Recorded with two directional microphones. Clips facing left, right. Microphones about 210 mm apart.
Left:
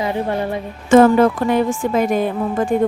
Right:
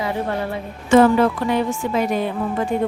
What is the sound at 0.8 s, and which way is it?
A woman's voice, 45° left (ahead or behind).